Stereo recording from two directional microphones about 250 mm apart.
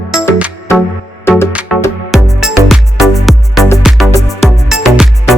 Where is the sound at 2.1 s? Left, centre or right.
Centre.